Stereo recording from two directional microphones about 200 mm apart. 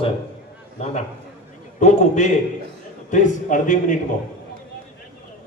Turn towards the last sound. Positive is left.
turn(degrees=40)  # may be behind; listen again after turning